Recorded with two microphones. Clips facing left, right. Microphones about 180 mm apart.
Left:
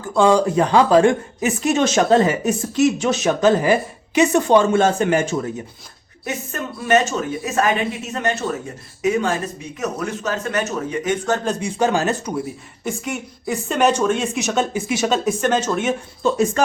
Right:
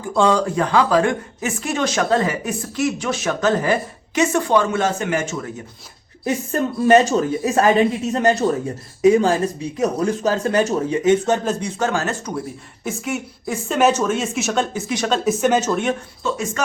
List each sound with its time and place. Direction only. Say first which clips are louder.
0.1 s a woman's voice: left 2 dB; 5° left (ahead or behind); by 5.5 s 35° left (ahead or behind)
6.2 s speech: right 6 dB; 35° right (ahead or behind)
11.6 s speech: left 3 dB; 15° left (ahead or behind)
12.8 s speech: right 1 dB; centre (ahead or behind)
16.2 s speech: left 6 dB; 35° left (ahead or behind)